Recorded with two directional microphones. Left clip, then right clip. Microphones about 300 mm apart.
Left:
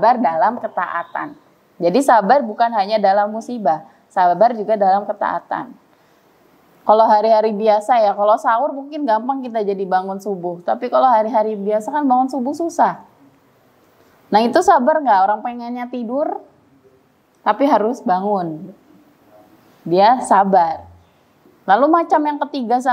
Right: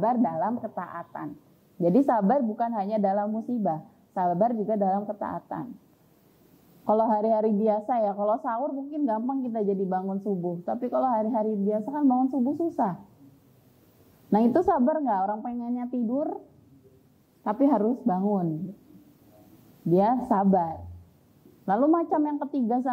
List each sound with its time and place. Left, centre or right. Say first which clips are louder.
0.0 s a woman's voice: left 12 dB; centre
7.0 s a woman's voice: left 11 dB; centre; by 10.6 s left
10.6 s a woman's voice: left 13 dB; centre
14.3 s a woman's voice: left 11 dB; centre
20.0 s a woman's voice: left 13 dB; centre
21.9 s a woman's voice: left 10 dB; centre